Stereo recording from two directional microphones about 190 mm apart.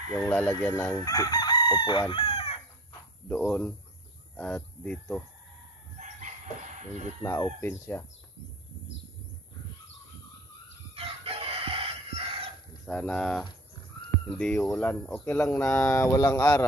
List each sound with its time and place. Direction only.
0.1 s speech: 10° left (ahead or behind)
1.0 s chicken: 20° left (ahead or behind)
3.3 s speech: 5° left (ahead or behind)
5.9 s chicken: 40° right (ahead or behind)
7.2 s speech: 15° left (ahead or behind)
11.0 s chicken: 30° right (ahead or behind)
12.8 s speech: 5° left (ahead or behind)